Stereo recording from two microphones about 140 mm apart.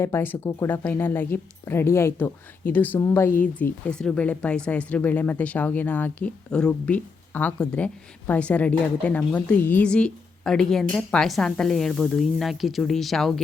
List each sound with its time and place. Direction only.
0.0 s a woman's voice: 15° left (ahead or behind)